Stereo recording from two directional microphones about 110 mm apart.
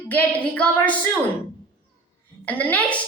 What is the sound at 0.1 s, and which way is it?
Speech, 15° left (ahead or behind).